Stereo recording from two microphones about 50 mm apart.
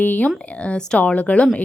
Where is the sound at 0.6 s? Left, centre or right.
Centre.